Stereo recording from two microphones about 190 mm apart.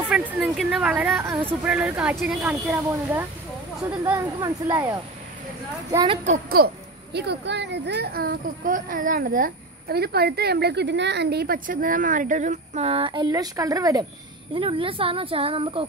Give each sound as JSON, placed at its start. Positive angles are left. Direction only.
{"t": 0.1, "sound": "speech", "side_deg": -5}
{"t": 6.2, "sound": "speech", "side_deg": -40}
{"t": 6.6, "sound": "a woman's voice", "side_deg": -60}